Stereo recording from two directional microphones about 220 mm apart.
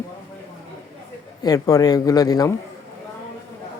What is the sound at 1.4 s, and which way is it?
Speech, 15° left (ahead or behind).